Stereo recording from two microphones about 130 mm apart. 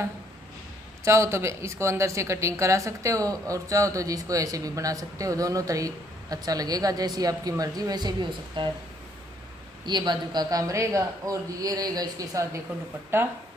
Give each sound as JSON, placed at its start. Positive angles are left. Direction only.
{"t": 1.0, "sound": "speech", "side_deg": -20}
{"t": 9.8, "sound": "speech", "side_deg": -35}